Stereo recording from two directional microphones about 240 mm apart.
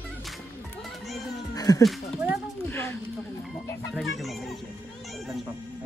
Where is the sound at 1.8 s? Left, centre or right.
Centre.